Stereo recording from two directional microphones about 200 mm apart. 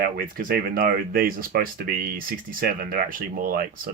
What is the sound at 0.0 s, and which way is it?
Speech, 45° right (ahead or behind).